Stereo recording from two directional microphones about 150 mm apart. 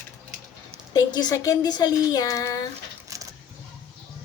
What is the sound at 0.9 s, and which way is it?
Speech, 25° left (ahead or behind).